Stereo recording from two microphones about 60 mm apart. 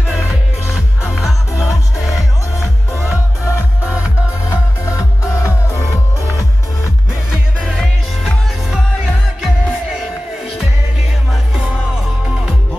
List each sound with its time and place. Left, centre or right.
0.0 s music: centre
3.4 s music: left
7.2 s music: centre
7.8 s music: centre
11.5 s music: centre